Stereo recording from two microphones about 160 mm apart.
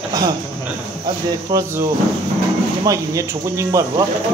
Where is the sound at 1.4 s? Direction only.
20° right (ahead or behind).